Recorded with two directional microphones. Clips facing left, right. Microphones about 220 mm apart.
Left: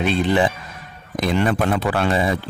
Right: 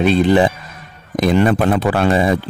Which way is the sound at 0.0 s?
40° right (ahead or behind).